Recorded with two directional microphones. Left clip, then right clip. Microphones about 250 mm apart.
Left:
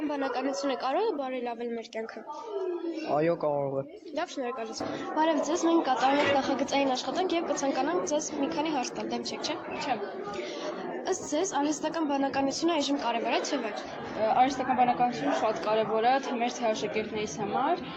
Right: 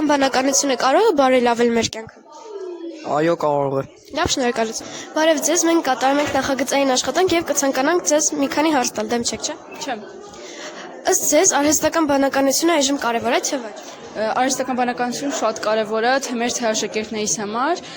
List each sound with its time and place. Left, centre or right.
0.1 s a woman's voice: right
3.1 s a woman's voice: right
11.0 s a woman's voice: right